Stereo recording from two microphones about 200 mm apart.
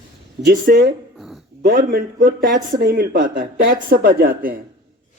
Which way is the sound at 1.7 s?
40° right (ahead or behind).